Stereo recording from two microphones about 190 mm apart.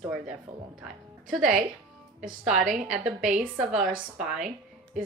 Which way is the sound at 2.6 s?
45° right (ahead or behind).